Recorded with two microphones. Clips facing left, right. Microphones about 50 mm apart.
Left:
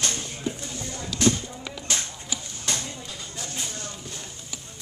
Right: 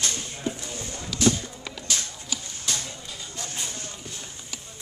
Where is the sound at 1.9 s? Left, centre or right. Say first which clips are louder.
Left 1 dB; left.